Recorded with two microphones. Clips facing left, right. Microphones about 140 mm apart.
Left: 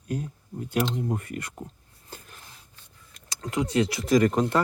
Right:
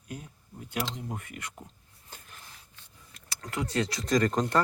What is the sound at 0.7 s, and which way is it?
Speech, 40° left (ahead or behind).